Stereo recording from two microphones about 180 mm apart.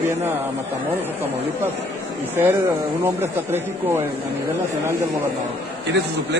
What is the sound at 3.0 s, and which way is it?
Speech, 10° right (ahead or behind).